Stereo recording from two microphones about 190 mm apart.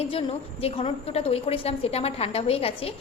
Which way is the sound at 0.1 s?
30° left (ahead or behind).